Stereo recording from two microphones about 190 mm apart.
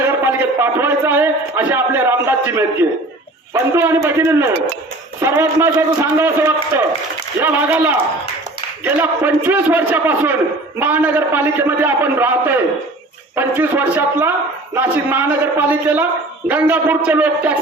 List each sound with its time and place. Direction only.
0.6 s a man's voice: 10° right (ahead or behind)